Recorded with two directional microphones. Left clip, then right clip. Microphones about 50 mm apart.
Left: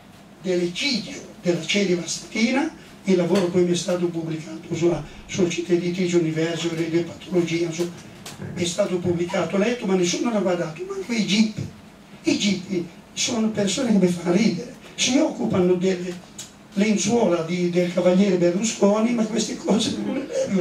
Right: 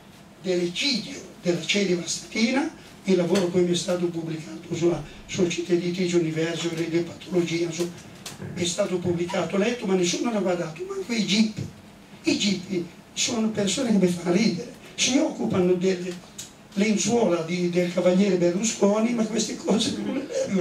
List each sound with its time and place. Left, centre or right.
0.5 s speech: centre